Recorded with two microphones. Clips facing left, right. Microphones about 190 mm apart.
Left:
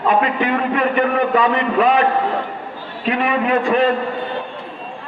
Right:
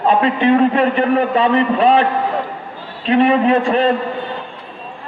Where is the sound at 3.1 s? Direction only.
30° right (ahead or behind).